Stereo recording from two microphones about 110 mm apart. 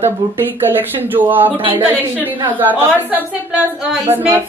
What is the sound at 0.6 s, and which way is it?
A woman's voice, 15° right (ahead or behind).